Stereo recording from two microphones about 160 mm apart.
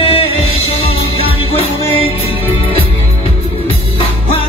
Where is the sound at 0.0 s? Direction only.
35° left (ahead or behind).